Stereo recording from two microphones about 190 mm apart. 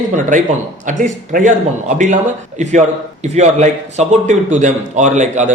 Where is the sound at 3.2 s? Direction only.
35° right (ahead or behind).